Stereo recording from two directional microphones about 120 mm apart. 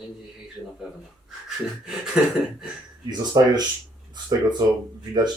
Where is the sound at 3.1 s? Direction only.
35° right (ahead or behind).